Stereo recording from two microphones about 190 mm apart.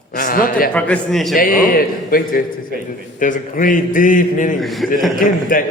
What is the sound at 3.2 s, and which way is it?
A man's voice, 45° left (ahead or behind).